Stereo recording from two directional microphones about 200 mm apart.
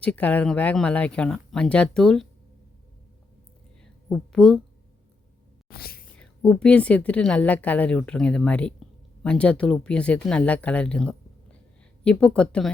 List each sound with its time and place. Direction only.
0.0 s a woman's voice: 5° left (ahead or behind)
4.1 s a woman's voice: 5° left (ahead or behind)
5.6 s speech: 50° left (ahead or behind)
6.1 s a woman's voice: 5° left (ahead or behind)